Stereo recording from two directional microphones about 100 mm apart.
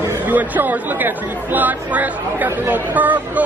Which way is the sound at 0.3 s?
15° right (ahead or behind).